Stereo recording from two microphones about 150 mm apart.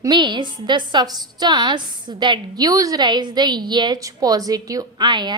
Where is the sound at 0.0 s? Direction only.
30° right (ahead or behind).